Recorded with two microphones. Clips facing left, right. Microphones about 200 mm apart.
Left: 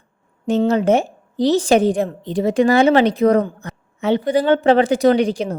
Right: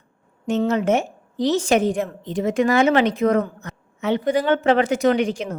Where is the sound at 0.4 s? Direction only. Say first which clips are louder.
Left 4 dB; 35° left (ahead or behind).